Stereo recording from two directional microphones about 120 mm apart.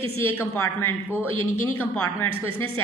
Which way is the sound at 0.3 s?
20° left (ahead or behind).